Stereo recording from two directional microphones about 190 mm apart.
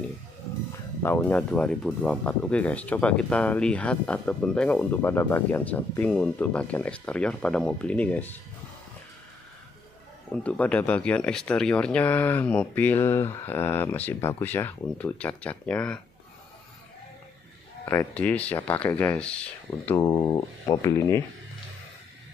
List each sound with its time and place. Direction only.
1.0 s speech: 10° left (ahead or behind)
10.3 s speech: 5° left (ahead or behind)
17.8 s speech: 10° left (ahead or behind)
20.0 s speech: 20° left (ahead or behind)